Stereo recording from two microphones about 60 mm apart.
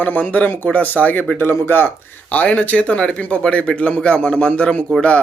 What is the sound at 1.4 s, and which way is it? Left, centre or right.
Speech, left.